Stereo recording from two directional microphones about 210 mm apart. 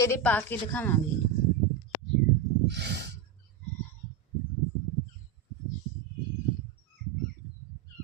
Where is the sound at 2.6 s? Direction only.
55° right (ahead or behind).